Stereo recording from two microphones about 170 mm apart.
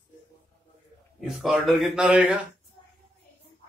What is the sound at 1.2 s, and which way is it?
Speech, centre (ahead or behind).